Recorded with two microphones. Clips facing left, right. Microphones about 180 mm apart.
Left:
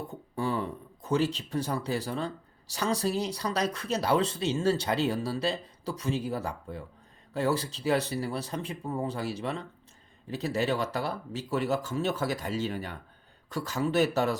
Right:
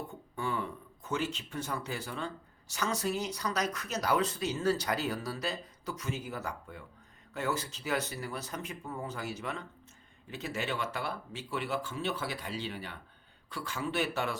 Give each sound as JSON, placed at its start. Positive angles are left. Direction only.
{"t": 0.1, "sound": "speech", "side_deg": 35}